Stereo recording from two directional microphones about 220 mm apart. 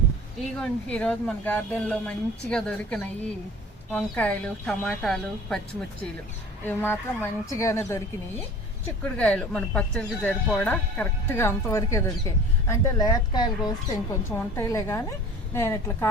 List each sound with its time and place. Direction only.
0.6 s speech: 5° left (ahead or behind)
6.7 s speech: 10° left (ahead or behind)
9.0 s speech: 5° left (ahead or behind)